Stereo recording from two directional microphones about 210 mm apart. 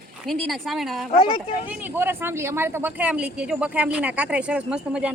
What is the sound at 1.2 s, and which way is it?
Speech, 25° left (ahead or behind).